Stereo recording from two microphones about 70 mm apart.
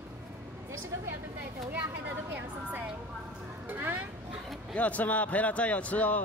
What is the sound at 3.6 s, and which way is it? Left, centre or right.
Speech, right.